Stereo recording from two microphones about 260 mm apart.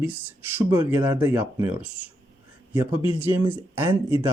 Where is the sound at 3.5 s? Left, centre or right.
Centre.